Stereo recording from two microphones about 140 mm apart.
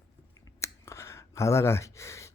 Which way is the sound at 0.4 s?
20° left (ahead or behind).